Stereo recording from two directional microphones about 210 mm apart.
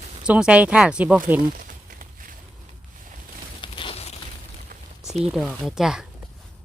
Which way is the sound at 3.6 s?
25° left (ahead or behind).